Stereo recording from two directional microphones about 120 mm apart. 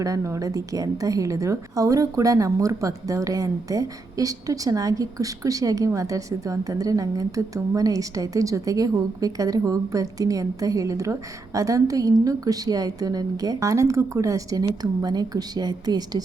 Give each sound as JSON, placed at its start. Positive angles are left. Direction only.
{"t": 0.0, "sound": "a woman's voice", "side_deg": -30}